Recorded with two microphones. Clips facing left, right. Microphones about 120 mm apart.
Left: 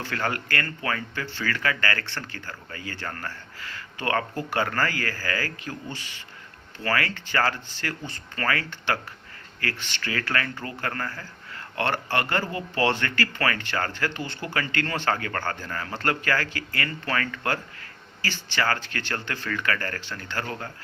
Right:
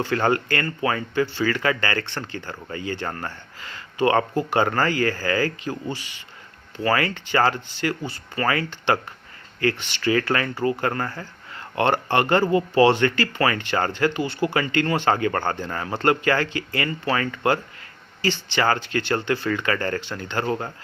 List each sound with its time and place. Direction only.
0.0 s speech: 25° right (ahead or behind)
6.7 s speech: 20° right (ahead or behind)